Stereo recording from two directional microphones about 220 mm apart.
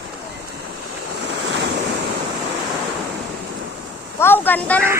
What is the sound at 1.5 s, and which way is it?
Waves, 55° right (ahead or behind).